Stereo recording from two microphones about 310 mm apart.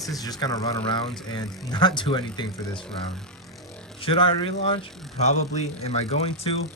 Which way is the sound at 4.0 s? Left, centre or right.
Centre.